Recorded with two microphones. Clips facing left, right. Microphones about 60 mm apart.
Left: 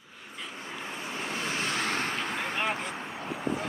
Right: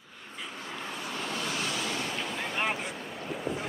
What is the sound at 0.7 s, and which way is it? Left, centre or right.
Vehicle, centre.